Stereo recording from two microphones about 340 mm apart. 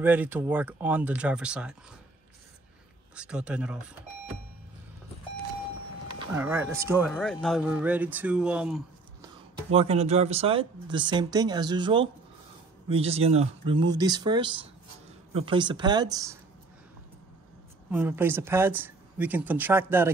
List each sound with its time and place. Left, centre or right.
0.0 s speech: centre
3.2 s speech: centre
6.0 s speech: centre
9.7 s speech: centre
17.9 s speech: centre